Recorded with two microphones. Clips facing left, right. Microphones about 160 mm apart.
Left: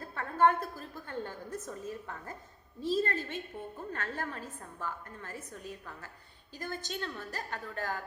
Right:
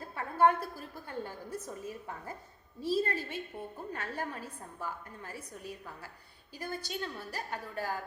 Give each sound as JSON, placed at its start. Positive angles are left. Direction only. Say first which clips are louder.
{"t": 0.0, "sound": "a woman's voice", "louder": "even", "side_deg": -10}